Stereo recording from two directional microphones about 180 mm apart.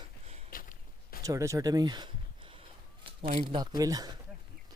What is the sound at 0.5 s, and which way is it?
Walk, 50° left (ahead or behind).